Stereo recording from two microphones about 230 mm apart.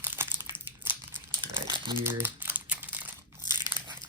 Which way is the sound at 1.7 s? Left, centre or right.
Centre.